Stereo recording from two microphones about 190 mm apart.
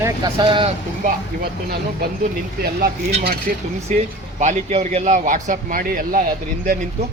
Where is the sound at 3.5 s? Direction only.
50° right (ahead or behind).